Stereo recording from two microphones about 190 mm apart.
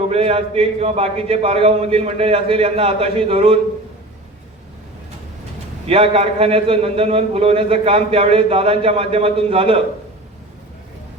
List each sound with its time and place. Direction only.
0.1 s a man's voice: 30° right (ahead or behind)
5.9 s a man's voice: 30° right (ahead or behind)